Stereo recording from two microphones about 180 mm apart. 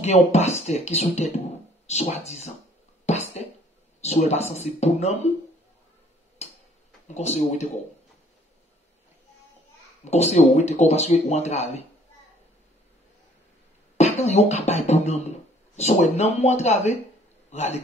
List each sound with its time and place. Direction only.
0.0 s speech: 35° left (ahead or behind)
3.1 s a sound: 40° left (ahead or behind)
4.0 s speech: 35° left (ahead or behind)
6.4 s tick-tock: 35° left (ahead or behind)
7.2 s speech: 40° left (ahead or behind)
10.0 s speech: 40° left (ahead or behind)
13.9 s a man's voice: 35° left (ahead or behind)